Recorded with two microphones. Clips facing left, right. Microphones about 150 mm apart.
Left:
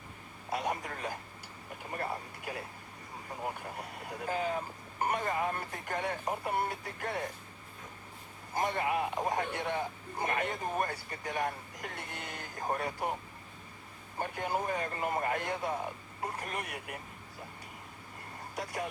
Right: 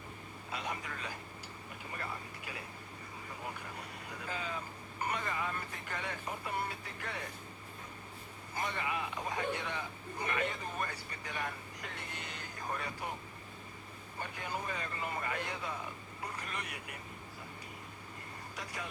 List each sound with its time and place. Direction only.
0.5 s speech: 50° left (ahead or behind)
8.5 s speech: 45° left (ahead or behind)
14.2 s speech: 50° left (ahead or behind)
18.5 s speech: 50° left (ahead or behind)